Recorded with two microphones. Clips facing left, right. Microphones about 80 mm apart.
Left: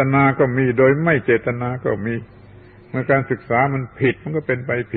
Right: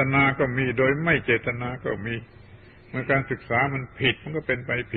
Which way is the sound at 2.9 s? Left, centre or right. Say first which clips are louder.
Left 7 dB; left.